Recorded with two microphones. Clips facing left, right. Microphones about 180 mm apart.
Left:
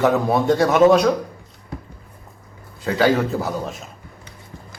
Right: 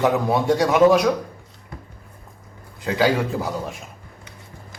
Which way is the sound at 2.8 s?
15° right (ahead or behind).